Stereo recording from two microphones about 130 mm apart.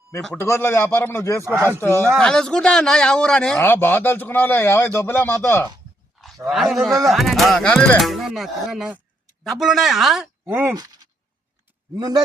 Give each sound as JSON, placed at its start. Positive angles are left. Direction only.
{"t": 0.3, "sound": "a man's voice", "side_deg": 20}
{"t": 1.5, "sound": "speech", "side_deg": -20}
{"t": 2.1, "sound": "speech", "side_deg": 5}
{"t": 3.6, "sound": "a man's voice", "side_deg": 15}
{"t": 6.2, "sound": "speech", "side_deg": 0}
{"t": 10.4, "sound": "speech", "side_deg": -15}
{"t": 10.8, "sound": "speech", "side_deg": -30}